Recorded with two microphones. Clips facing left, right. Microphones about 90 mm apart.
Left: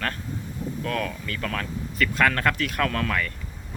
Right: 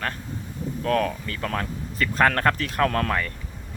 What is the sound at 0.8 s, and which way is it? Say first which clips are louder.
Speech: right 7 dB; 40° right (ahead or behind).